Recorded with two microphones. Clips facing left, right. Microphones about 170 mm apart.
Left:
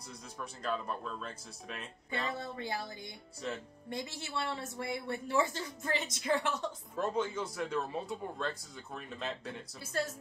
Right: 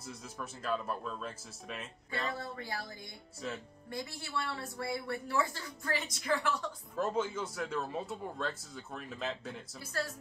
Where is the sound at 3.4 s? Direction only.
Centre (ahead or behind).